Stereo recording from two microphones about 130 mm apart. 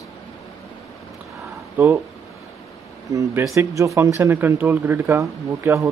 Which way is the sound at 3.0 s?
25° right (ahead or behind).